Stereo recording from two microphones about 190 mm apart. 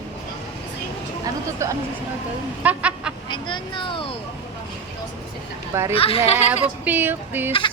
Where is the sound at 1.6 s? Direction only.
15° right (ahead or behind).